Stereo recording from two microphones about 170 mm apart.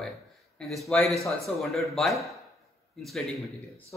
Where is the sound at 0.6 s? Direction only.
Centre (ahead or behind).